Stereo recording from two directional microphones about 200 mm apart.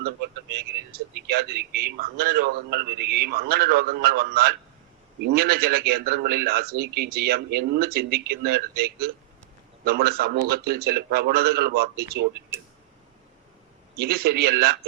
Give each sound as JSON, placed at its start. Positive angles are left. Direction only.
{"t": 0.5, "sound": "a man's voice", "side_deg": -50}
{"t": 12.5, "sound": "a sound", "side_deg": -10}
{"t": 14.0, "sound": "a man's voice", "side_deg": -50}